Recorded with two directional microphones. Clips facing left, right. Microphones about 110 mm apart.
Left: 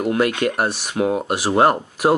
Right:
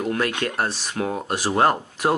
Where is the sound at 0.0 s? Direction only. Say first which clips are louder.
Left 5 dB; 20° left (ahead or behind).